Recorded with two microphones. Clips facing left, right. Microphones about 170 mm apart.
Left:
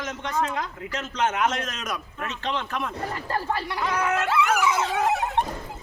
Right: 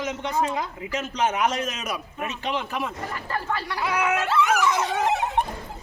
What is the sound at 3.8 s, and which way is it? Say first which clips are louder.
Speech: right 2 dB; 10° right (ahead or behind).